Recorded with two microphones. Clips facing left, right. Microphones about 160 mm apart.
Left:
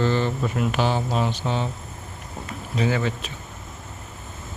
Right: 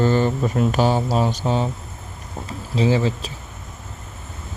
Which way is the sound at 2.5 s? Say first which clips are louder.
Right 5 dB; 30° right (ahead or behind).